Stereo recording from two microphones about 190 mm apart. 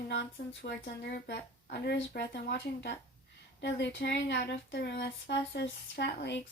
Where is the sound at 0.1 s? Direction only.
65° left (ahead or behind).